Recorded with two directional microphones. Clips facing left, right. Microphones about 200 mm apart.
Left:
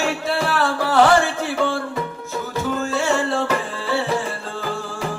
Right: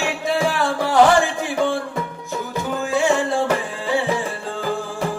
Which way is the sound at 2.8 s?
15° right (ahead or behind).